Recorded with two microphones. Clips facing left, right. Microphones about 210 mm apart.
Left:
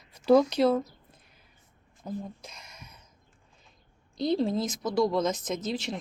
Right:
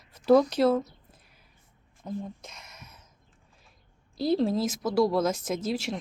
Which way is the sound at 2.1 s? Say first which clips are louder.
Right 1 dB; centre (ahead or behind).